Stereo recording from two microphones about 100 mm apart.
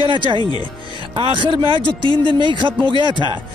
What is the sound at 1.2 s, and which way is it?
A man's voice, 55° right (ahead or behind).